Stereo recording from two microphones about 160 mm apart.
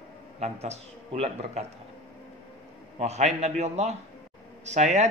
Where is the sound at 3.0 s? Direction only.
45° right (ahead or behind).